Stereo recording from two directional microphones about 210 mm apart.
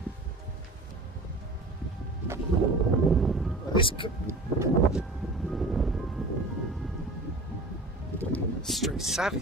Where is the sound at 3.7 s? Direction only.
25° left (ahead or behind).